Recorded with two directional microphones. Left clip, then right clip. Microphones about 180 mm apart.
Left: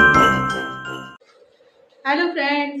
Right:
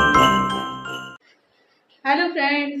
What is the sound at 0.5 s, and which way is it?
Jingle bell, 50° left (ahead or behind).